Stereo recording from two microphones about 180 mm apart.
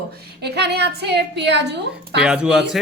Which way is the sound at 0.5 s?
65° right (ahead or behind).